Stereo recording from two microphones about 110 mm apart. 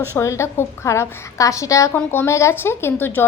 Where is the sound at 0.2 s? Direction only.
25° left (ahead or behind).